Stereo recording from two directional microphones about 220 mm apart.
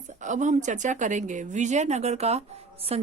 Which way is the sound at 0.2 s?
35° right (ahead or behind).